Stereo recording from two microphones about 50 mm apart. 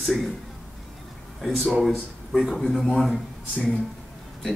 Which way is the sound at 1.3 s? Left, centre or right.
Centre.